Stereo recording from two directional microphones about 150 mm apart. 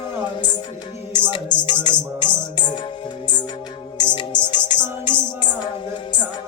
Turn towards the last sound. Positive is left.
turn(degrees=30)  # may be behind; listen again after turning